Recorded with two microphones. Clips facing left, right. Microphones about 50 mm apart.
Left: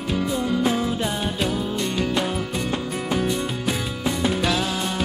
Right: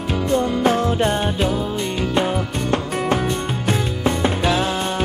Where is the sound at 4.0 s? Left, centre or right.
Right.